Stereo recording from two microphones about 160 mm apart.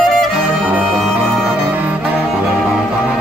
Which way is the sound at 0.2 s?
5° right (ahead or behind).